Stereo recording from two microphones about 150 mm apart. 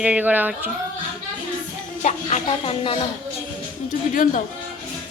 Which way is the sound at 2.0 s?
50° left (ahead or behind).